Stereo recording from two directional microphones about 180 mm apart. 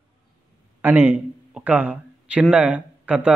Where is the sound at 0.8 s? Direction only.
10° right (ahead or behind).